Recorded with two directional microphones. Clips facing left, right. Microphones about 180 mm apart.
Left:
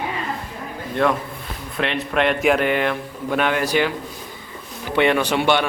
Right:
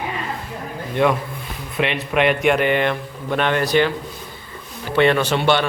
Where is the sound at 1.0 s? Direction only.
5° right (ahead or behind).